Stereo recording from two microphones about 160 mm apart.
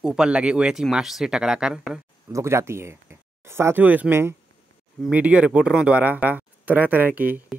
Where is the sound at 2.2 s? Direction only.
15° right (ahead or behind).